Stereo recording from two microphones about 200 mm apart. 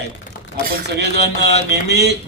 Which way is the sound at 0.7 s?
55° right (ahead or behind).